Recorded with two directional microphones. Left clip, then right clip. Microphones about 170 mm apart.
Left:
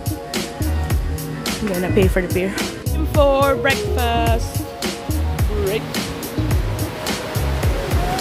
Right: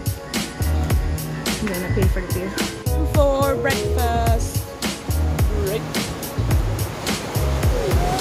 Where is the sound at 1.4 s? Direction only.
Centre (ahead or behind).